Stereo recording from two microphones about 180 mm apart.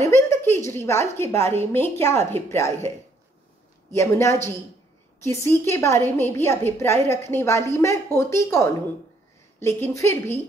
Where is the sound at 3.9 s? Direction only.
15° left (ahead or behind).